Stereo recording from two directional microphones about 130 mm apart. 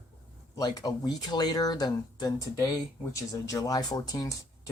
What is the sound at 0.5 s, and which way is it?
Speech, 30° left (ahead or behind).